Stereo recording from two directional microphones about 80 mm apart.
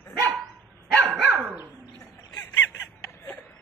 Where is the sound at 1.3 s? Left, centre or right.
Right.